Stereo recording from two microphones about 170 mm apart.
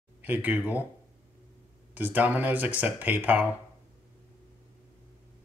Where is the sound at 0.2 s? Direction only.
10° right (ahead or behind).